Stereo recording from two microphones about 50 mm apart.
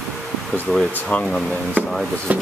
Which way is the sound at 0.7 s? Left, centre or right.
Centre.